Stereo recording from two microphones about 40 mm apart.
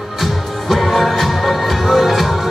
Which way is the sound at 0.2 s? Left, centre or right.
Centre.